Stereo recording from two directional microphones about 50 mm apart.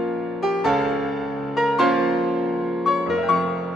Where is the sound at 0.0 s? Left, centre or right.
Centre.